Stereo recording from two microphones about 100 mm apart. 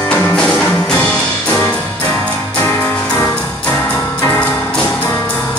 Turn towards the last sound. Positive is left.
turn(degrees=15)  # may be behind; listen again after turning